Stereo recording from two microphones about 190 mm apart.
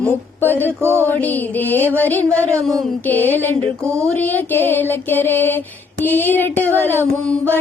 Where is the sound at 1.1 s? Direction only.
10° left (ahead or behind).